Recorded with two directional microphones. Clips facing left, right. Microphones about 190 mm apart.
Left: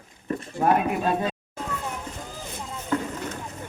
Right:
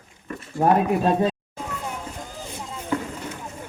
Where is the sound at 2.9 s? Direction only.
10° right (ahead or behind).